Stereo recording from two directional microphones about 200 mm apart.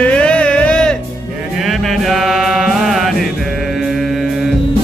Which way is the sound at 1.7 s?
Centre (ahead or behind).